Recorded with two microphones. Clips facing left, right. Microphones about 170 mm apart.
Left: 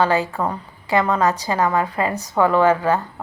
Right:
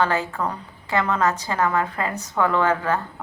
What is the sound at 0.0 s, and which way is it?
A woman's voice, 15° left (ahead or behind).